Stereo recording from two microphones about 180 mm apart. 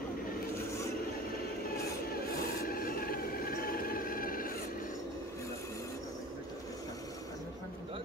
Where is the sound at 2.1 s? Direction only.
55° left (ahead or behind).